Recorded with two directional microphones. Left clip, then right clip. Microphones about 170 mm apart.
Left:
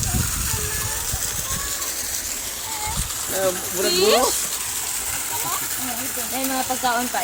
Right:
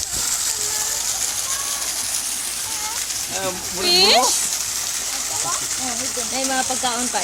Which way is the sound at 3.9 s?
50° right (ahead or behind).